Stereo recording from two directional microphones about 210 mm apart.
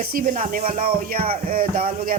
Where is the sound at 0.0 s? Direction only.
45° right (ahead or behind).